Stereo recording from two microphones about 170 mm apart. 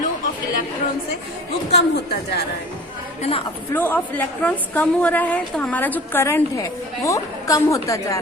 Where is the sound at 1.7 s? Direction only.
70° left (ahead or behind).